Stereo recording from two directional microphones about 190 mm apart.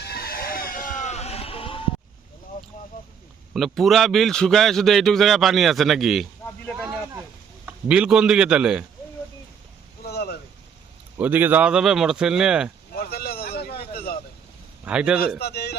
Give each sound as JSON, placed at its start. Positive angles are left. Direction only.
{"t": 0.0, "sound": "a sound", "side_deg": 55}
{"t": 3.5, "sound": "a man's voice", "side_deg": 0}
{"t": 6.7, "sound": "a sound", "side_deg": -10}
{"t": 7.6, "sound": "a man's voice", "side_deg": -5}
{"t": 10.0, "sound": "vehicle", "side_deg": 55}
{"t": 11.2, "sound": "a man's voice", "side_deg": -10}
{"t": 12.9, "sound": "vehicle", "side_deg": 55}
{"t": 14.8, "sound": "a man's voice", "side_deg": -5}
{"t": 15.4, "sound": "a sound", "side_deg": 60}